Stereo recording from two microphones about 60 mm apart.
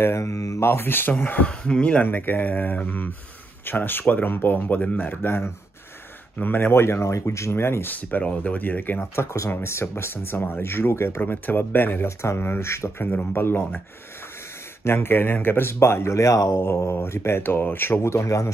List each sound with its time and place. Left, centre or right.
0.0 s speech: left
0.6 s speech: left
1.4 s speech: centre
2.0 s speech: left
7.9 s speech: left
9.1 s speech: left
13.0 s speech: left
14.9 s speech: left
16.9 s speech: left